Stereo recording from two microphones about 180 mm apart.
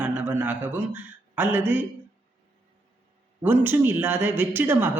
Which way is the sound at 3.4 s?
10° right (ahead or behind).